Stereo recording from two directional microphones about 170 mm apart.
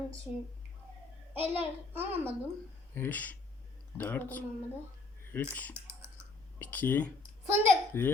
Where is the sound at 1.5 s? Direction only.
10° right (ahead or behind).